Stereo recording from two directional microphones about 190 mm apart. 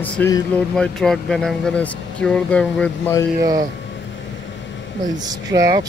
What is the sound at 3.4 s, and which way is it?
Speech, 20° right (ahead or behind).